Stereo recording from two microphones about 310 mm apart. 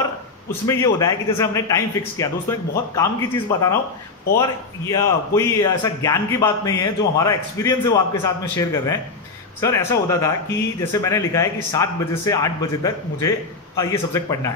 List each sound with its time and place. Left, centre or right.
0.0 s a man's voice: centre